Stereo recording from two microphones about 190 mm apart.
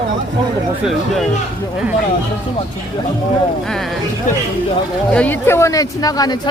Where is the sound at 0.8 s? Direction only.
Centre (ahead or behind).